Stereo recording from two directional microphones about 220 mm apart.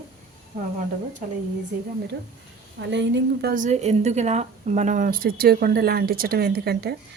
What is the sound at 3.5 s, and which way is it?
A woman's voice, 35° right (ahead or behind).